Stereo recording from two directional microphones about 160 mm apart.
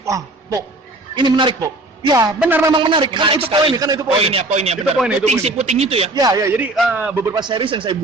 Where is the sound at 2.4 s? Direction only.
10° right (ahead or behind).